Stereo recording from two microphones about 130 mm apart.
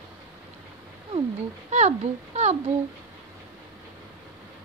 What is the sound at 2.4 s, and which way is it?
Speech, 60° right (ahead or behind).